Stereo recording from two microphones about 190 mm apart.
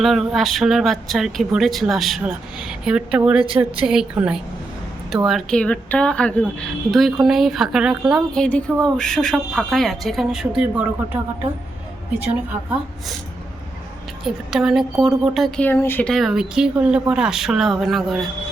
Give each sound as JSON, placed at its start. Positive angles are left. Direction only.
{"t": 0.0, "sound": "a woman's voice", "side_deg": 0}
{"t": 14.3, "sound": "speech", "side_deg": 0}